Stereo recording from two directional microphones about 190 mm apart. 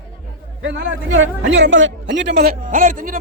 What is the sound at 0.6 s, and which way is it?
A man's voice, 80° right.